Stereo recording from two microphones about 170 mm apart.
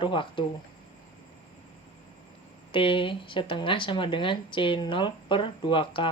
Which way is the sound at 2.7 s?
30° left (ahead or behind).